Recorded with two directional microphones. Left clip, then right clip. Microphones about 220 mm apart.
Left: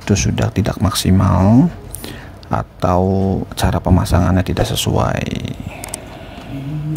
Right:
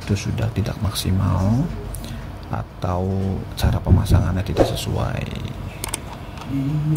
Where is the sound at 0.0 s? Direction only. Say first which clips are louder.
Left 8 dB; 30° left (ahead or behind).